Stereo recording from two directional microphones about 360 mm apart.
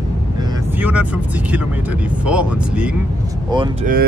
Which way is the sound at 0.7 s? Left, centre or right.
Centre.